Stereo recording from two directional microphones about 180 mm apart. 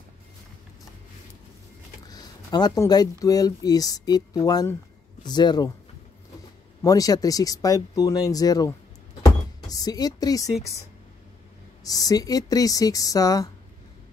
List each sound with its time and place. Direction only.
2.0 s speech: 20° left (ahead or behind)
6.8 s speech: 20° left (ahead or behind)
9.2 s a sound: 20° left (ahead or behind)
11.8 s speech: 20° left (ahead or behind)